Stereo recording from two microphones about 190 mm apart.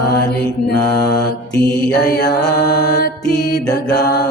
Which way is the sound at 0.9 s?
20° left (ahead or behind).